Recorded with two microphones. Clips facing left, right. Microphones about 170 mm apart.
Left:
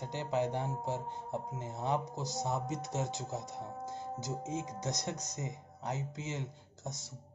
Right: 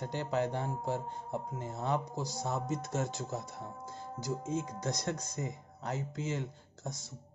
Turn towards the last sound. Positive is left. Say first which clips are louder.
# right 1 dB
turn(degrees=20)  # may be behind; listen again after turning